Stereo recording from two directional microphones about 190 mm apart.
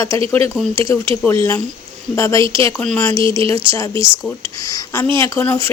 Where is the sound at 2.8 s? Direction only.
10° left (ahead or behind).